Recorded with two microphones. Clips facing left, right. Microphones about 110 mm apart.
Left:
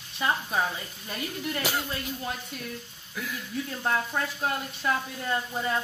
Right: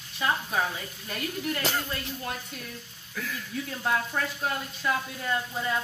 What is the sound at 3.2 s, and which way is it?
Speech, 15° left (ahead or behind).